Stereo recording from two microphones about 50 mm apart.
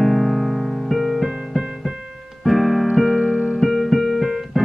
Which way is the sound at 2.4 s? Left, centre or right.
Centre.